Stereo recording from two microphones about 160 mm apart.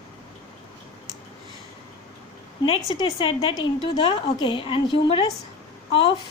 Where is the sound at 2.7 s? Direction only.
35° left (ahead or behind).